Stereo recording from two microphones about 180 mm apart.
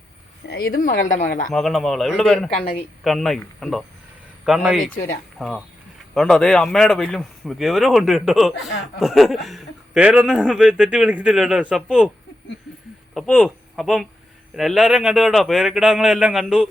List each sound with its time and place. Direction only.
0.4 s speech: 60° left (ahead or behind)
1.5 s speech: centre (ahead or behind)
2.6 s speech: 35° left (ahead or behind)
3.0 s speech: centre (ahead or behind)
13.1 s speech: centre (ahead or behind)